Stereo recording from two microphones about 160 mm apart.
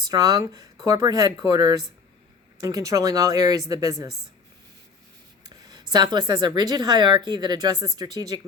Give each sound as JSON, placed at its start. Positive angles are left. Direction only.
{"t": 0.1, "sound": "a woman's voice", "side_deg": -20}
{"t": 5.5, "sound": "a woman's voice", "side_deg": -25}